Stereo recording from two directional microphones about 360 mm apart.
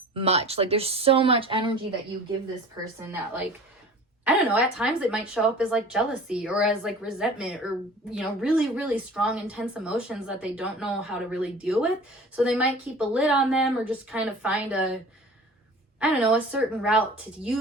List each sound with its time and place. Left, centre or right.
0.1 s a woman's voice: centre
4.2 s a woman's voice: centre
16.0 s a woman's voice: centre